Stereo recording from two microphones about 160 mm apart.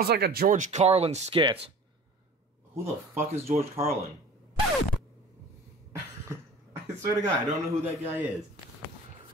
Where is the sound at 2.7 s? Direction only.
15° right (ahead or behind).